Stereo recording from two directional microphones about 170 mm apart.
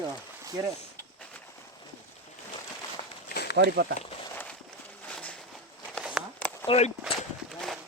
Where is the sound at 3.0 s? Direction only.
35° left (ahead or behind).